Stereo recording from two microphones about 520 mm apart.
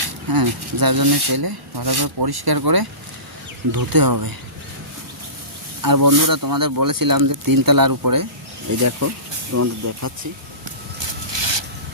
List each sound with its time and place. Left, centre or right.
0.0 s speech: right
5.8 s speech: right
11.0 s a sound: right